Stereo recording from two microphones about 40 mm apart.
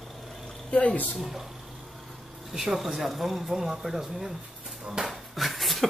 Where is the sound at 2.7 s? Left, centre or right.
Centre.